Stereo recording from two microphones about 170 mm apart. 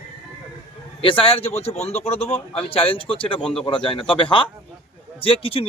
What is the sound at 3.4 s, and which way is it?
Speech, 5° left (ahead or behind).